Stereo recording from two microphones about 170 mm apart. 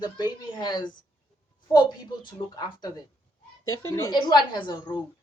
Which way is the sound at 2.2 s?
25° left (ahead or behind).